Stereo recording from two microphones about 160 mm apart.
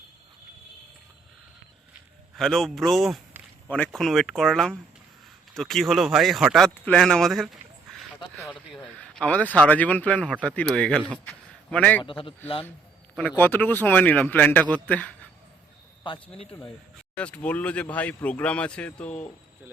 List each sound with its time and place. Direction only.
2.3 s a man's voice: centre (ahead or behind)
8.7 s a man's voice: centre (ahead or behind)
12.0 s a man's voice: 35° left (ahead or behind)
13.1 s speech: 10° left (ahead or behind)
16.0 s a man's voice: 30° left (ahead or behind)
17.2 s speech: 10° left (ahead or behind)